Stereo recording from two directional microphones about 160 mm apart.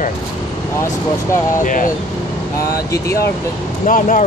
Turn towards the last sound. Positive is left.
turn(degrees=55)  # may be behind; listen again after turning